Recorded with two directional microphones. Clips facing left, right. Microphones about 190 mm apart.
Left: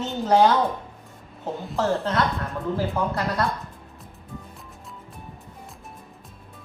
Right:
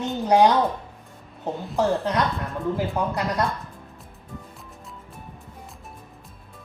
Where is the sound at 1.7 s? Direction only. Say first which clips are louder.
Right 1 dB; 15° right (ahead or behind).